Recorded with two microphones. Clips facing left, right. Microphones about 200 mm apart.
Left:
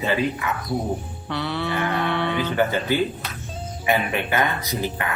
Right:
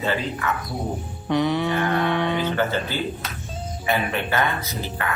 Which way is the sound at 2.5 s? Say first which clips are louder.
Left 3 dB; 15° left (ahead or behind).